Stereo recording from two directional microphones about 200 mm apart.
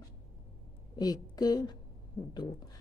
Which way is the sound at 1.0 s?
20° left (ahead or behind).